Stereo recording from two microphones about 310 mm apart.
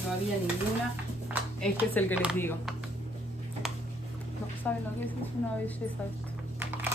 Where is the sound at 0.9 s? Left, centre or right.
Centre.